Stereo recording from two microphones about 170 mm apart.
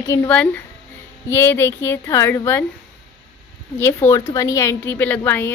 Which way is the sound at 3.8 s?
15° left (ahead or behind).